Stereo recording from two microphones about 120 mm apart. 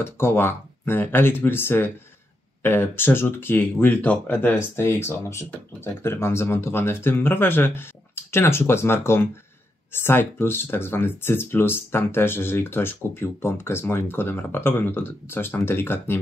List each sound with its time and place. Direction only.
0.0 s speech: 20° left (ahead or behind)